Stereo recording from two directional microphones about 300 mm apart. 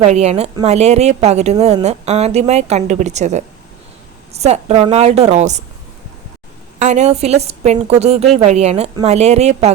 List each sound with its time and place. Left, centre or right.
0.0 s a woman's voice: right
6.7 s a woman's voice: right